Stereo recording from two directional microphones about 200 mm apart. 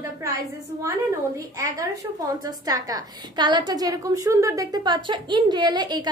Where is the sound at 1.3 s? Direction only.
15° right (ahead or behind).